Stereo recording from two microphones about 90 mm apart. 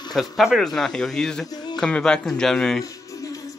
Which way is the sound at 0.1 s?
Centre (ahead or behind).